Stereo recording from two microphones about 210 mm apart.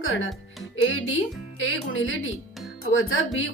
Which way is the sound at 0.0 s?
70° left (ahead or behind).